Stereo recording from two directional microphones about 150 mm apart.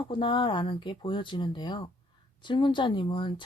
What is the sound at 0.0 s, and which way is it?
Speech, 35° left (ahead or behind).